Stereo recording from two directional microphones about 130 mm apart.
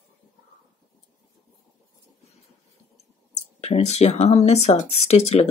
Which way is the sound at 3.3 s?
60° left (ahead or behind).